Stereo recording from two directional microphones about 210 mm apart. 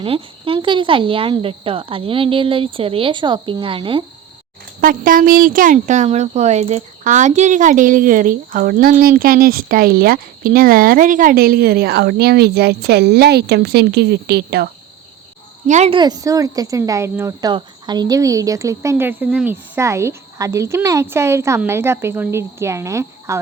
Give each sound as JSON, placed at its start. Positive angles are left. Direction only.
{"t": 0.0, "sound": "speech", "side_deg": -25}
{"t": 4.8, "sound": "speech", "side_deg": -40}
{"t": 15.6, "sound": "a woman's voice", "side_deg": -35}
{"t": 16.0, "sound": "speech", "side_deg": -20}